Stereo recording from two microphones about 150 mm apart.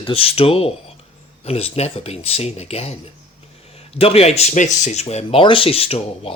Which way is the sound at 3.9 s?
40° left (ahead or behind).